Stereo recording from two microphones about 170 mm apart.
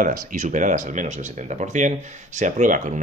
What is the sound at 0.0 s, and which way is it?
Speech, 55° right (ahead or behind).